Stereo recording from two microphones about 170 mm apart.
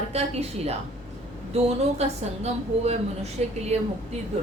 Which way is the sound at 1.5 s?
40° right (ahead or behind).